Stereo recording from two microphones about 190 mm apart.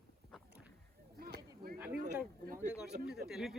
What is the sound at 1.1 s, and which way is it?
Whip, 55° right (ahead or behind).